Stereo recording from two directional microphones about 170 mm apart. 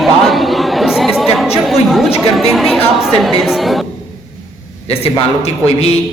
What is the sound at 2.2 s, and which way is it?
A woman's voice, centre (ahead or behind).